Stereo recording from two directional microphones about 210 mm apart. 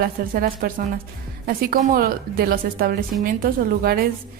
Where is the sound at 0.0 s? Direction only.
45° right (ahead or behind).